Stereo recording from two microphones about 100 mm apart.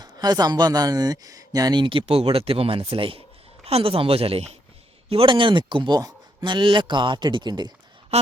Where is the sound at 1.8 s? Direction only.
65° right (ahead or behind).